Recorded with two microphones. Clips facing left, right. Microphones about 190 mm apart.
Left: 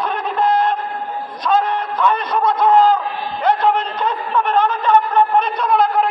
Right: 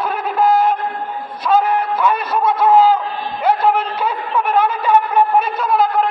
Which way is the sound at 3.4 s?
10° right (ahead or behind).